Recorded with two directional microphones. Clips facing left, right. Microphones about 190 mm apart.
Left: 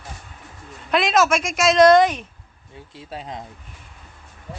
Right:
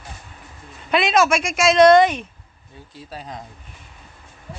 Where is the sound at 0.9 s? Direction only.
Centre (ahead or behind).